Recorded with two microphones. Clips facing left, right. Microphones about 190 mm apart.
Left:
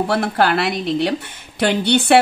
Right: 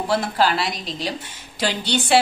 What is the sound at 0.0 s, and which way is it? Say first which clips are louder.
A woman's voice: left 3 dB; 60° left (ahead or behind).